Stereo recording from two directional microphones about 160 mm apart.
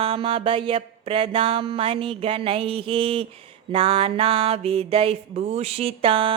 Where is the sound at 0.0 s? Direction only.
35° right (ahead or behind).